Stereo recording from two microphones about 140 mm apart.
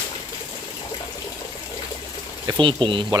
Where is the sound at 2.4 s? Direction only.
35° right (ahead or behind).